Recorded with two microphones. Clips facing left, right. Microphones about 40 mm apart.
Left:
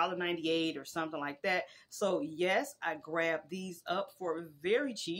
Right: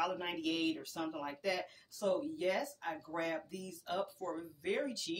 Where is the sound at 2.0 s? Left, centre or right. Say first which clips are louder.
Left 3 dB; left.